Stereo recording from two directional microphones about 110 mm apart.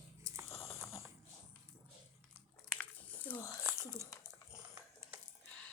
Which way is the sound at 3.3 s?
15° left (ahead or behind).